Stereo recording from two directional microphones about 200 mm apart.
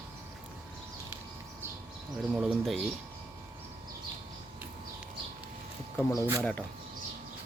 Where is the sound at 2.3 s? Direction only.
Centre (ahead or behind).